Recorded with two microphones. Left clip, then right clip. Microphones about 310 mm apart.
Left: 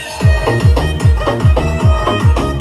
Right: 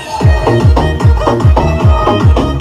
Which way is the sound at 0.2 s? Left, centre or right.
Right.